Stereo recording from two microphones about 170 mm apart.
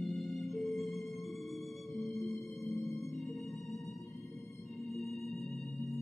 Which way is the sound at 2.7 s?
20° left (ahead or behind).